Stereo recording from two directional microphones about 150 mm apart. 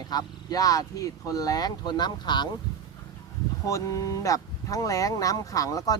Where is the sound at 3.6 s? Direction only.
20° left (ahead or behind).